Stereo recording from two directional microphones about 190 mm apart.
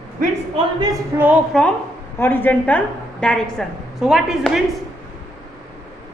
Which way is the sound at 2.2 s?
10° left (ahead or behind).